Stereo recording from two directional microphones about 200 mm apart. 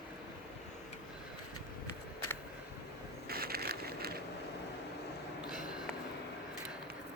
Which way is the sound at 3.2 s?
50° right (ahead or behind).